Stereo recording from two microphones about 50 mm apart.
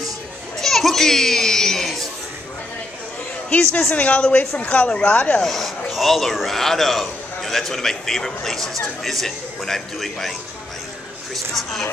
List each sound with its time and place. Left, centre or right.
0.6 s children playing: centre
3.4 s a woman's voice: left
5.4 s a man's voice: centre
11.5 s a man's voice: centre